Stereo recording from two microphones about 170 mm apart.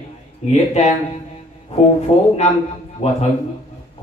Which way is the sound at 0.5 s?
40° left (ahead or behind).